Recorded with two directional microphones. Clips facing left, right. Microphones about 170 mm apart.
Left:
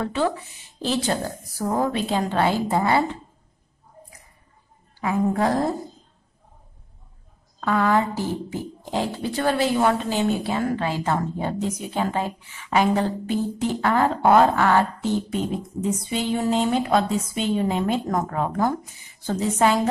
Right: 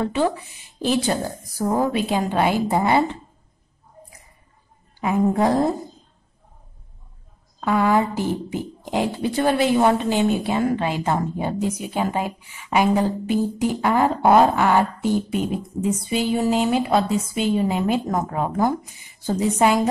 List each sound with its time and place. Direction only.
0.0 s speech: 15° right (ahead or behind)
5.0 s a woman's voice: 20° right (ahead or behind)
7.6 s speech: 10° right (ahead or behind)